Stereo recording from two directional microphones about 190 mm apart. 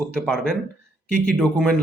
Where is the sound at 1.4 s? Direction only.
5° left (ahead or behind).